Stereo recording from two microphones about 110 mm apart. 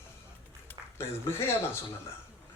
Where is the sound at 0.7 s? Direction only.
20° left (ahead or behind).